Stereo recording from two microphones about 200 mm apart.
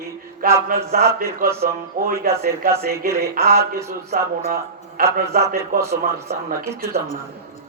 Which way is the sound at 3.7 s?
15° right (ahead or behind).